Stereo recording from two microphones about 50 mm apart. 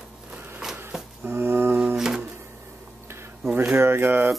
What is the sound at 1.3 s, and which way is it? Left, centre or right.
Music, right.